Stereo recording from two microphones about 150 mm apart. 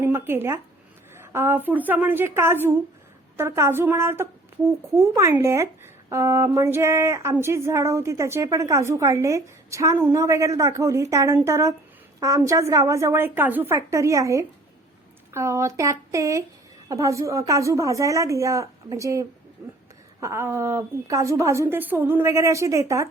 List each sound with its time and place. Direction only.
0.0 s a woman's voice: 15° right (ahead or behind)